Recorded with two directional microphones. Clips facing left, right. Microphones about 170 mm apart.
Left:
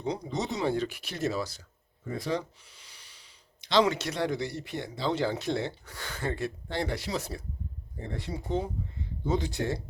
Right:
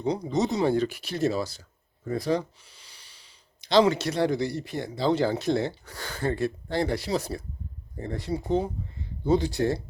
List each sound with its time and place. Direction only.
0.0 s speech: 40° right (ahead or behind)